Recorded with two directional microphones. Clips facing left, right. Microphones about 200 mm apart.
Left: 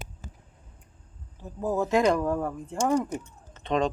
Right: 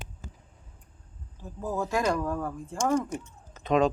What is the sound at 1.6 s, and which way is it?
A woman's voice, 20° left (ahead or behind).